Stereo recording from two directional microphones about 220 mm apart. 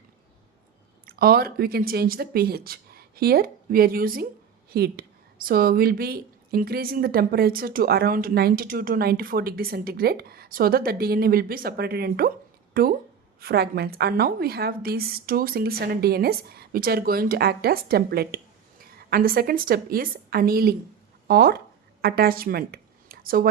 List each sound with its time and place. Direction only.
1.0 s a woman's voice: 45° right (ahead or behind)